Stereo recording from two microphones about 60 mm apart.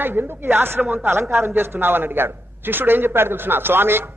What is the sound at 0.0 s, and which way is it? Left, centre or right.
A man's voice, right.